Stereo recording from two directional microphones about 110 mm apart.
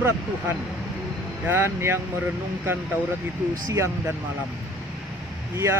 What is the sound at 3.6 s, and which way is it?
Speech, 30° right (ahead or behind).